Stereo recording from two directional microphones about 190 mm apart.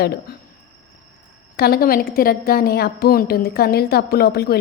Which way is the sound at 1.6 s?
55° left (ahead or behind).